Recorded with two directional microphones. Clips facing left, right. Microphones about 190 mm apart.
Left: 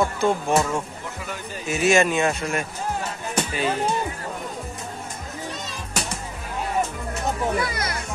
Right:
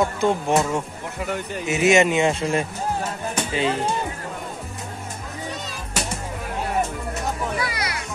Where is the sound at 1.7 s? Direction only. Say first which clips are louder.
Right 2 dB; 20° right (ahead or behind).